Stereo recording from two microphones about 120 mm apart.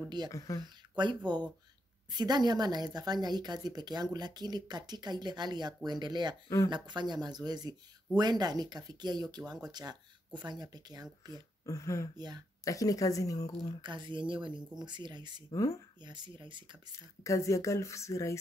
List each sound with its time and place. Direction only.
0.3 s speech: 25° left (ahead or behind)
0.9 s a woman's voice: 40° right (ahead or behind)
11.6 s speech: 25° left (ahead or behind)
13.7 s a woman's voice: 40° right (ahead or behind)
15.5 s speech: 30° left (ahead or behind)
16.0 s a woman's voice: 40° right (ahead or behind)
17.2 s speech: 25° left (ahead or behind)